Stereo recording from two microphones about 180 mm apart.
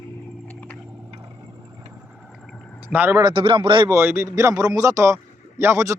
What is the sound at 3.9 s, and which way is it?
Speech, 15° right (ahead or behind).